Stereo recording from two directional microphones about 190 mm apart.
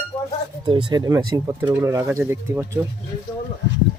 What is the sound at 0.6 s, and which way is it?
Speech, 25° right (ahead or behind).